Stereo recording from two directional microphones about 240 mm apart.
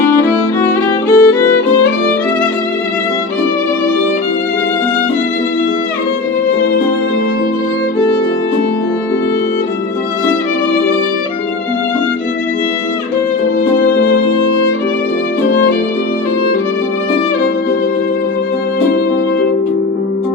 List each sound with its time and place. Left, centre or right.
0.0 s music: centre